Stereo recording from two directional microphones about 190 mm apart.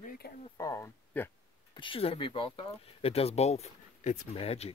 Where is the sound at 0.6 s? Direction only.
15° left (ahead or behind).